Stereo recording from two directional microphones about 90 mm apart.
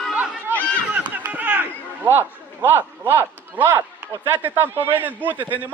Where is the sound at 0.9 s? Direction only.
20° right (ahead or behind).